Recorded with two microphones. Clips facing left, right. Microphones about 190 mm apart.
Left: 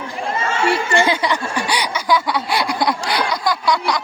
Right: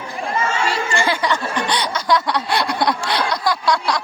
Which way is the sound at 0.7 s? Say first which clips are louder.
Left 4 dB; 65° left (ahead or behind).